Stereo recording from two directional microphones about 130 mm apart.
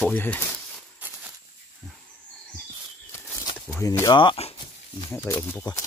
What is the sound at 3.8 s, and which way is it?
Speech, 30° left (ahead or behind).